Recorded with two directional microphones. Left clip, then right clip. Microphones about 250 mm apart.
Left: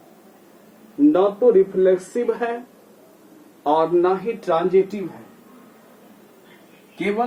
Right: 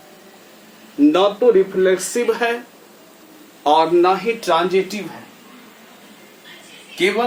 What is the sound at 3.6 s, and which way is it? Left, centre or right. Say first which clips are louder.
Speech: right 4 dB; centre.